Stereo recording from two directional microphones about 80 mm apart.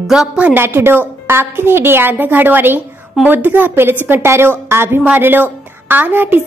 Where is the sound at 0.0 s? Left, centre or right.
Centre.